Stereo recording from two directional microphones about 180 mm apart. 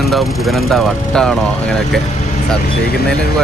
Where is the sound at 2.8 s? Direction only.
60° left (ahead or behind).